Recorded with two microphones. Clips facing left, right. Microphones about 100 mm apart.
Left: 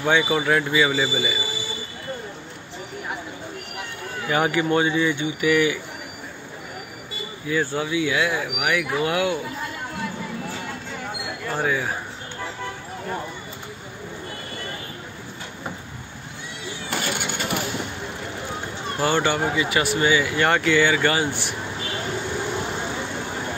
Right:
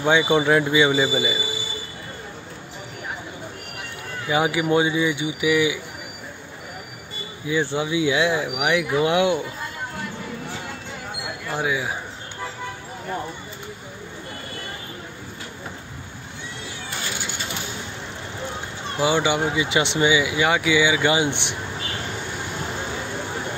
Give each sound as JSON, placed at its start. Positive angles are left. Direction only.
{"t": 0.0, "sound": "speech", "side_deg": -20}
{"t": 4.3, "sound": "speech", "side_deg": -15}
{"t": 7.7, "sound": "speech", "side_deg": -20}
{"t": 11.5, "sound": "speech", "side_deg": -10}
{"t": 16.9, "sound": "vehicle", "side_deg": 65}
{"t": 18.9, "sound": "speech", "side_deg": -10}